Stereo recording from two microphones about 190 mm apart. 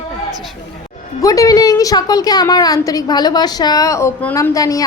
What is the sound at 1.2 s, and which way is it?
A woman's voice, 20° left (ahead or behind).